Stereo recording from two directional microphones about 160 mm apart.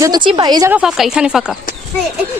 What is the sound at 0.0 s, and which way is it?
Speech, 25° right (ahead or behind).